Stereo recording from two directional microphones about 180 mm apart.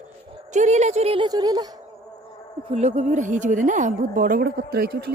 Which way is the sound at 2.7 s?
40° right (ahead or behind).